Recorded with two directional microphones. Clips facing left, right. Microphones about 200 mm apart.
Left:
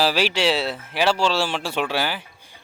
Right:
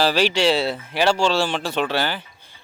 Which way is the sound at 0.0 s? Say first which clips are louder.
Right 2 dB; 5° left (ahead or behind).